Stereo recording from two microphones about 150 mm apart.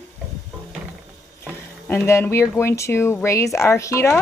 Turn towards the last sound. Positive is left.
turn(degrees=20)  # may be behind; listen again after turning